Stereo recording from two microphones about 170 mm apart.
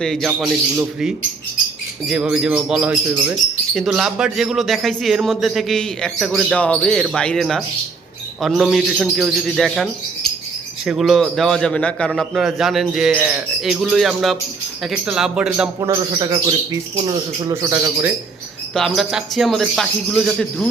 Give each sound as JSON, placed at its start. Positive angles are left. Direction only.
{"t": 0.0, "sound": "speech", "side_deg": 0}
{"t": 15.9, "sound": "speech", "side_deg": -25}
{"t": 18.7, "sound": "speech", "side_deg": 0}